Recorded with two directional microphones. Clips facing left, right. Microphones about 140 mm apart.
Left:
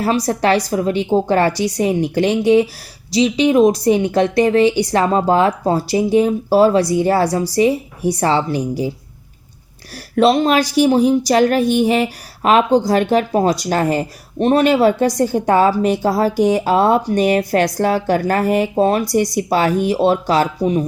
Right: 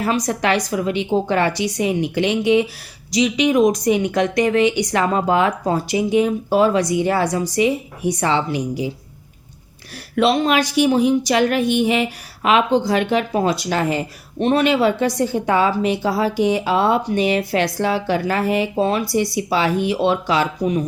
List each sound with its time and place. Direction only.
0.0 s a woman's voice: 35° left (ahead or behind)
10.2 s a woman's voice: 35° left (ahead or behind)